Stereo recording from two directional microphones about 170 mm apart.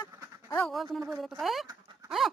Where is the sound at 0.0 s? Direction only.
15° left (ahead or behind).